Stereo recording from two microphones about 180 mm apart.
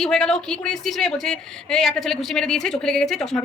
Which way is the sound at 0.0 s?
5° left (ahead or behind).